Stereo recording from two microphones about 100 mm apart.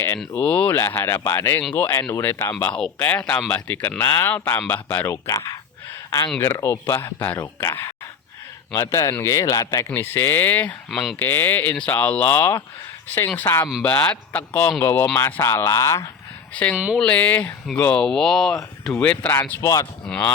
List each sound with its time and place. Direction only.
0.3 s speech: 15° left (ahead or behind)
7.7 s speech: 30° left (ahead or behind)
9.9 s speech: 25° left (ahead or behind)
10.9 s speech: centre (ahead or behind)
11.2 s speech: 20° left (ahead or behind)
16.7 s speech: 15° right (ahead or behind)
17.0 s speech: 15° left (ahead or behind)
19.6 s speech: 35° left (ahead or behind)
20.1 s speech: 15° left (ahead or behind)